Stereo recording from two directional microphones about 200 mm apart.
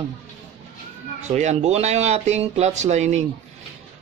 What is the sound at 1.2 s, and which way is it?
A man's voice, 35° right (ahead or behind).